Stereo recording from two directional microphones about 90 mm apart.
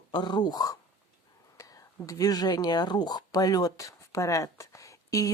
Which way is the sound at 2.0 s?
40° left (ahead or behind).